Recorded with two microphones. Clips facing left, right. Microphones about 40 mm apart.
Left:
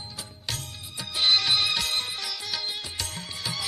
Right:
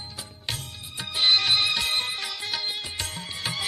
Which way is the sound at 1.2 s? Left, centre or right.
Centre.